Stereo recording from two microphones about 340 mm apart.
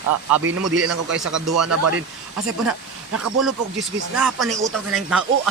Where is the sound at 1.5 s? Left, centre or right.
Right.